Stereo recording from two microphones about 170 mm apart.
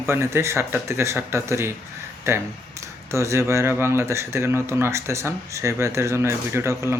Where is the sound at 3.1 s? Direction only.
15° right (ahead or behind).